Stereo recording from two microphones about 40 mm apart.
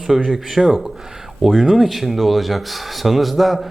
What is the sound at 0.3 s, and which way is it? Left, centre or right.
Speech, centre.